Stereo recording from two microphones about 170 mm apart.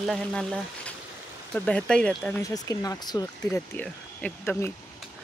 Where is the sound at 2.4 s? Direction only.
20° left (ahead or behind).